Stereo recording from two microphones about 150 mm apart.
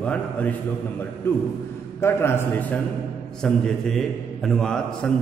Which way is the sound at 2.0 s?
15° left (ahead or behind).